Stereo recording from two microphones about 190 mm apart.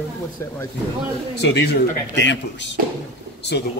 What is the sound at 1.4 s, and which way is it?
Speech, 60° left (ahead or behind).